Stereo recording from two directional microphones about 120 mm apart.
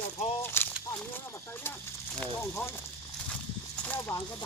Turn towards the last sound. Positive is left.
turn(degrees=20)  # may be behind; listen again after turning